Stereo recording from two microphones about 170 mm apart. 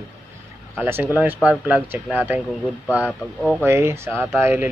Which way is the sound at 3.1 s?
5° left (ahead or behind).